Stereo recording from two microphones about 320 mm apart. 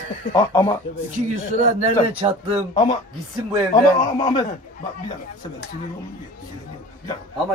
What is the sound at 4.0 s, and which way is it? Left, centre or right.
Speech, centre.